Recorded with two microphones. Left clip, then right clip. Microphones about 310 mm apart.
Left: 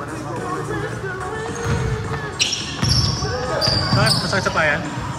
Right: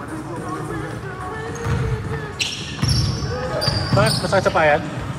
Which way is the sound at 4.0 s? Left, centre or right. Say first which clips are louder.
Right 1 dB; centre.